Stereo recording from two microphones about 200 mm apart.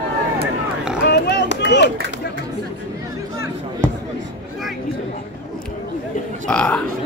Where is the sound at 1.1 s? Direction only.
55° left (ahead or behind).